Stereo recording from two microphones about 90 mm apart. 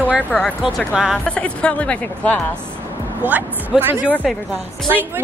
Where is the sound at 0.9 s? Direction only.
5° right (ahead or behind).